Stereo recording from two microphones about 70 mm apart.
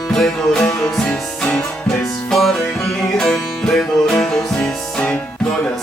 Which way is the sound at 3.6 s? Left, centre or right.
Centre.